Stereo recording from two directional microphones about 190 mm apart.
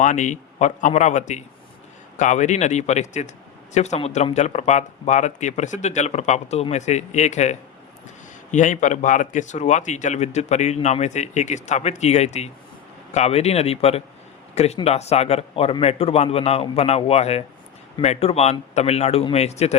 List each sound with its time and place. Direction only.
0.0 s a man's voice: 40° left (ahead or behind)